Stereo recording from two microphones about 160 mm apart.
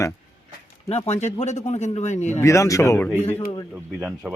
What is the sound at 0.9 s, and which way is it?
Speech, 40° left (ahead or behind).